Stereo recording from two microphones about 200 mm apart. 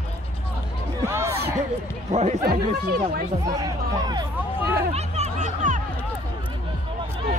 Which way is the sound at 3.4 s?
15° right (ahead or behind).